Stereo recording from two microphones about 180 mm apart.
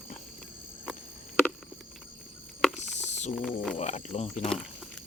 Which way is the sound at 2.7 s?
40° left (ahead or behind).